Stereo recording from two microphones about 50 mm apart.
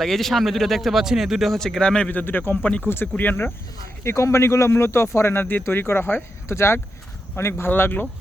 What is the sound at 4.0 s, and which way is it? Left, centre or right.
Speech, left.